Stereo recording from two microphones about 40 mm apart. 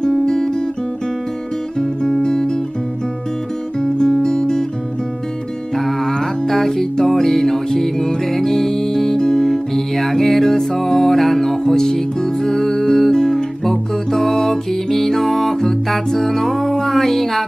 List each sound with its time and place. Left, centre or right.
0.0 s music: centre
1.8 s music: centre
3.8 s music: centre
5.8 s music: centre
9.5 s music: centre